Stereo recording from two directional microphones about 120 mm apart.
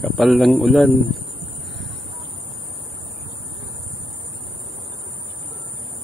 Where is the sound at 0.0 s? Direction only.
Centre (ahead or behind).